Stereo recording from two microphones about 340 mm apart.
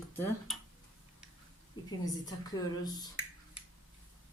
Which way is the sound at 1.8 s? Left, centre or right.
Left.